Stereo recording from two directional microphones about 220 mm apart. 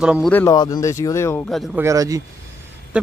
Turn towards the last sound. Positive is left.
turn(degrees=-5)  # may be behind; listen again after turning